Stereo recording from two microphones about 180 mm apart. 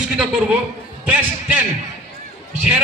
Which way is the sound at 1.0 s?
10° right (ahead or behind).